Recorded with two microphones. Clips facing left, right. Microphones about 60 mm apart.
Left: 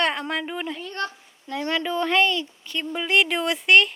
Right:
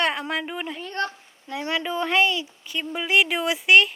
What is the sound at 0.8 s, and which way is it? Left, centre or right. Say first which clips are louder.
Speech: right 2 dB; right.